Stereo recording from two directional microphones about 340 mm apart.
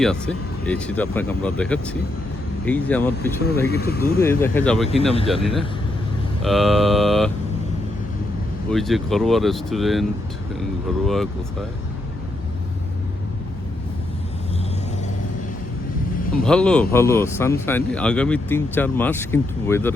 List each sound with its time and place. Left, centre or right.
0.0 s speech: centre
3.7 s speech: left
4.2 s speech: centre
8.7 s speech: centre
16.4 s speech: centre